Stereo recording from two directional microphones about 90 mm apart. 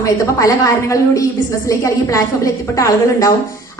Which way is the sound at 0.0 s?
35° left (ahead or behind).